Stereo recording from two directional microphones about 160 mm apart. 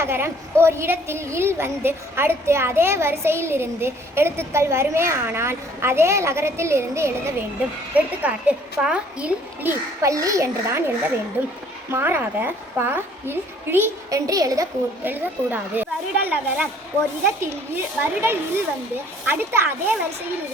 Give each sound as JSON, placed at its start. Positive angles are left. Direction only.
{"t": 0.0, "sound": "a woman's voice", "side_deg": -15}
{"t": 10.0, "sound": "a child's voice", "side_deg": -20}